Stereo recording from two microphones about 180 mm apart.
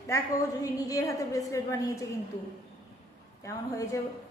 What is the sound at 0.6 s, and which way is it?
A woman's voice, 20° left (ahead or behind).